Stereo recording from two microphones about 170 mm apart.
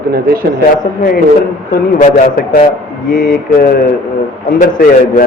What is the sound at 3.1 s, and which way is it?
Mantra, 55° left (ahead or behind).